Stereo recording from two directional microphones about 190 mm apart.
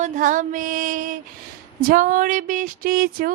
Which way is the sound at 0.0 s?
45° right (ahead or behind).